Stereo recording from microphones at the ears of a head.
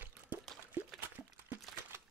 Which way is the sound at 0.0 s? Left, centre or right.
Right.